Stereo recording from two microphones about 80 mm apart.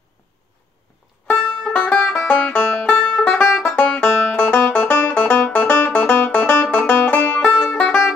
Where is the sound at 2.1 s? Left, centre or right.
Centre.